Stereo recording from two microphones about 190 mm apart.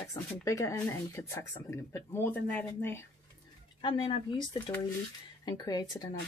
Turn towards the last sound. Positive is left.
turn(degrees=20)  # may be behind; listen again after turning